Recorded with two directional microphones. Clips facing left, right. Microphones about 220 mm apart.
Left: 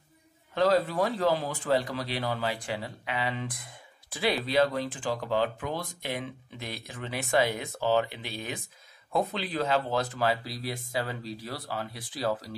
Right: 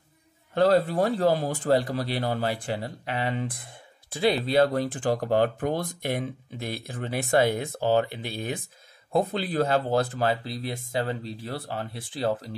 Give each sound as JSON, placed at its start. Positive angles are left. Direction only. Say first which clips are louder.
{"t": 0.6, "sound": "speech", "louder": "right 4 dB", "side_deg": -30}
{"t": 4.1, "sound": "speech", "louder": "right 5 dB", "side_deg": -25}
{"t": 4.7, "sound": "speech", "louder": "right 5 dB", "side_deg": -50}
{"t": 10.1, "sound": "speech", "louder": "right 2 dB", "side_deg": -25}